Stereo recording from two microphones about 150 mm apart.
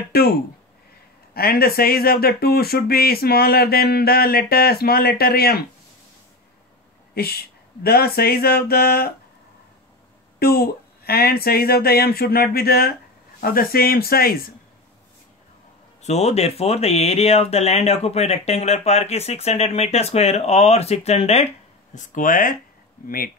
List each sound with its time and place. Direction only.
0.1 s speech: 90° left
7.2 s speech: 90° left
10.4 s speech: 90° left
16.0 s speech: 45° left (ahead or behind)
21.9 s speech: 60° left (ahead or behind); by 23.3 s 75° left (ahead or behind)